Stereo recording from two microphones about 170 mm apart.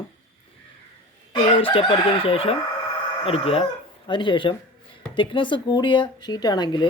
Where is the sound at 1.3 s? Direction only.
30° left (ahead or behind).